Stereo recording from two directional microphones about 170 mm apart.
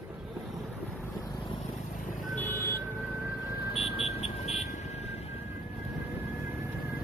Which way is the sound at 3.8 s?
35° left (ahead or behind).